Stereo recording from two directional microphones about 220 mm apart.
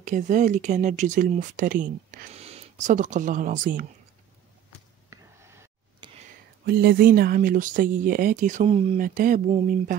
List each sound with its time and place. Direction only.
0.0 s speech: 35° right (ahead or behind)
5.1 s whispering: 10° right (ahead or behind)
6.6 s speech: 45° right (ahead or behind); by 8.9 s 25° right (ahead or behind)
8.9 s speech: 40° right (ahead or behind)